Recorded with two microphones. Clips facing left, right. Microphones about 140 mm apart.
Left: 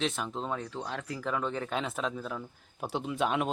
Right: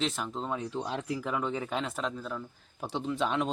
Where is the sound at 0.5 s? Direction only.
20° right (ahead or behind); by 3.4 s 5° left (ahead or behind).